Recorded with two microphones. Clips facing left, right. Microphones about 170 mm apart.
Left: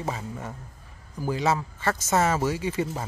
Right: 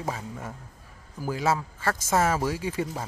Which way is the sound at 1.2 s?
5° right (ahead or behind).